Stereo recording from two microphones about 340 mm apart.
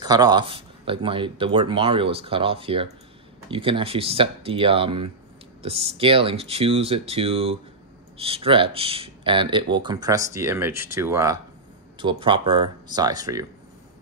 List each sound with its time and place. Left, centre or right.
0.0 s speech: centre